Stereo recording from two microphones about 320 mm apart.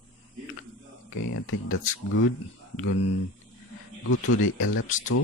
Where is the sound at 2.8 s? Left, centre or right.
Left.